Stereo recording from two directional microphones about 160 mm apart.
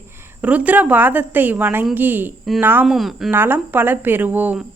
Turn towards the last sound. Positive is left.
turn(degrees=-10)  # may be behind; listen again after turning